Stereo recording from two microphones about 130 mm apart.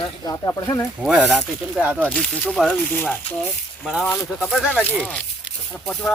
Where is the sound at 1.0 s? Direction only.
10° right (ahead or behind).